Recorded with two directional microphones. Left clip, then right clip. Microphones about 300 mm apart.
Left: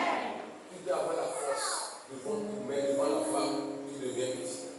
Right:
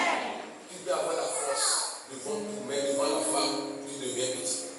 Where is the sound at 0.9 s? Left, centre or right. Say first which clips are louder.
Right 2 dB; centre.